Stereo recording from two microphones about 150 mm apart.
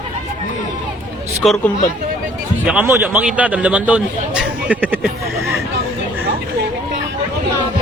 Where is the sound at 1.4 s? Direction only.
Centre (ahead or behind).